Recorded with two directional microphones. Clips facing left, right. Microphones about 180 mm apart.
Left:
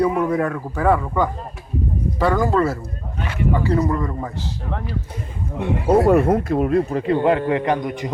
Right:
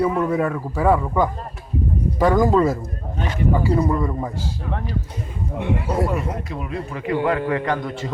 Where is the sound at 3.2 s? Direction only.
40° right (ahead or behind).